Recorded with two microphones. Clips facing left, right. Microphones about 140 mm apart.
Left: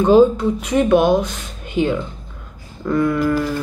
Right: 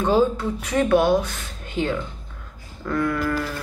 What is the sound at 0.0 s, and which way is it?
Speech, 20° left (ahead or behind).